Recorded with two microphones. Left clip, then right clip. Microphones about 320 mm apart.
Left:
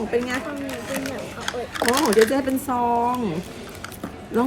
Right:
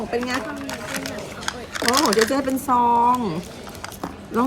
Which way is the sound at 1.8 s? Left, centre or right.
Centre.